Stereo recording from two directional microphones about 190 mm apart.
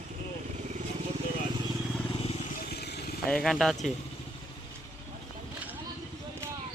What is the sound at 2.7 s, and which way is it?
Vehicle, 55° left (ahead or behind).